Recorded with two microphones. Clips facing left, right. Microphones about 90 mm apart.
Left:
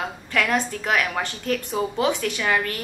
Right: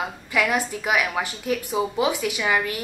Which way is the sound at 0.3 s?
10° right (ahead or behind).